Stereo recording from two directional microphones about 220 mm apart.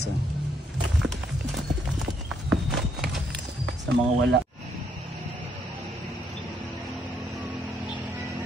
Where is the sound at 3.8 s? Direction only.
55° right (ahead or behind).